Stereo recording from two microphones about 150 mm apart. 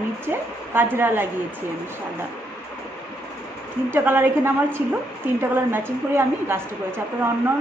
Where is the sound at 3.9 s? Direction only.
15° right (ahead or behind).